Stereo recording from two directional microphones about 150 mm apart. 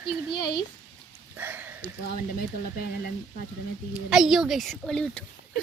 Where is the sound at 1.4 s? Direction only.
10° right (ahead or behind).